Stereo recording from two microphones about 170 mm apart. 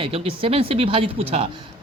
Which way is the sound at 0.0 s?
35° right (ahead or behind).